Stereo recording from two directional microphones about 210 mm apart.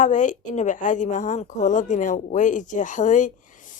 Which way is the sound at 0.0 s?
35° left (ahead or behind).